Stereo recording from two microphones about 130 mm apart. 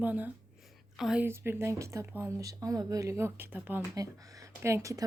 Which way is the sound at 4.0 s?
25° right (ahead or behind).